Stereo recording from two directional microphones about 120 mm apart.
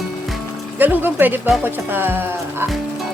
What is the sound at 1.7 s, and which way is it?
Speech, 15° right (ahead or behind).